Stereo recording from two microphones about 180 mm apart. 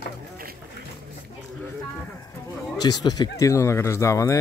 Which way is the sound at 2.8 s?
20° left (ahead or behind).